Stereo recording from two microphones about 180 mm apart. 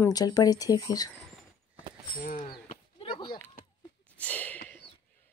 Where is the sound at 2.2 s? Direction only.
45° left (ahead or behind).